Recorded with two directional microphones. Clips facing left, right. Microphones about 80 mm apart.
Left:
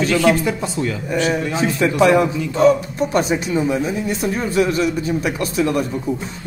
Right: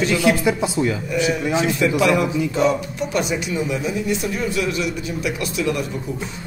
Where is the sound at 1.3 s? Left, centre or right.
Left.